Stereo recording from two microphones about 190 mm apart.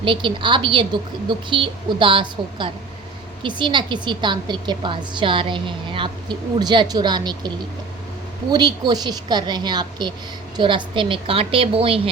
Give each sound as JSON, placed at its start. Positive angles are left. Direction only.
{"t": 0.0, "sound": "a woman's voice", "side_deg": -25}